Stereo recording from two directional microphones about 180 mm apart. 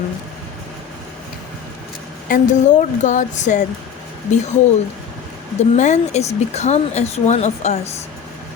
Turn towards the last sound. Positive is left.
turn(degrees=40)  # may be behind; listen again after turning